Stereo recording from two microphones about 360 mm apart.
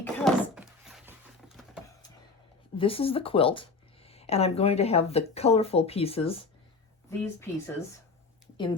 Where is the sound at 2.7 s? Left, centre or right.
Centre.